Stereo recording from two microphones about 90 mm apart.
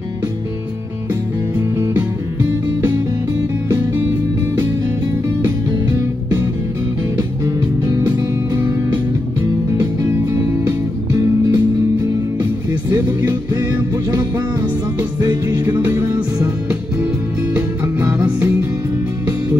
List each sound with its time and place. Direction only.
3.6 s music: 25° right (ahead or behind)
5.4 s music: 30° right (ahead or behind)
11.5 s music: 45° right (ahead or behind)
15.0 s music: 40° right (ahead or behind)
15.5 s music: 25° right (ahead or behind)
17.6 s music: 20° right (ahead or behind)